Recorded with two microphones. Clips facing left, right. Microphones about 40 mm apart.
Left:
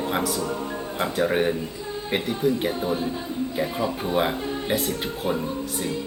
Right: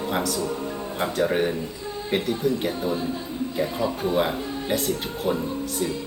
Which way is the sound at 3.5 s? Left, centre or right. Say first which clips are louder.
Right 2 dB; centre.